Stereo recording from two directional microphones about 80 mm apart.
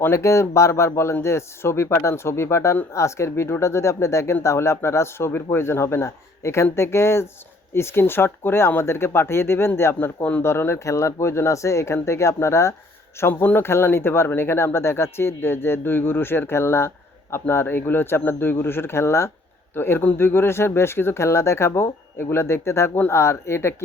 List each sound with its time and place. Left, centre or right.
0.0 s speech: left